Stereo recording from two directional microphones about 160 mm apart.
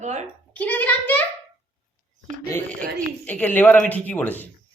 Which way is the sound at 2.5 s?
5° left (ahead or behind).